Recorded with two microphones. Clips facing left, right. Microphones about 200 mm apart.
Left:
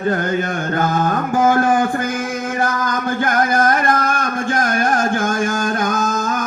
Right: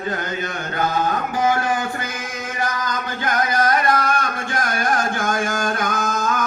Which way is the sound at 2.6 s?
50° left (ahead or behind).